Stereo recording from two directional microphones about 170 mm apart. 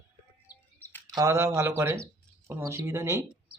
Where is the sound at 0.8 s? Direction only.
10° left (ahead or behind).